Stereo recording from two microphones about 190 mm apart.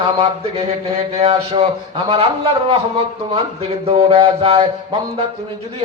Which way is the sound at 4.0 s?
30° right (ahead or behind).